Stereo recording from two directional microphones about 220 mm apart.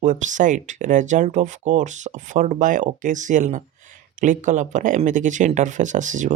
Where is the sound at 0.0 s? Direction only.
35° right (ahead or behind).